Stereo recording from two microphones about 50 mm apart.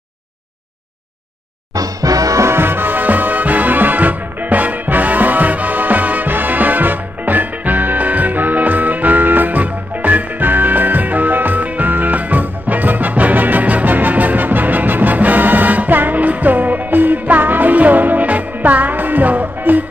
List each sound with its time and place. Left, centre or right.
2.5 s music: right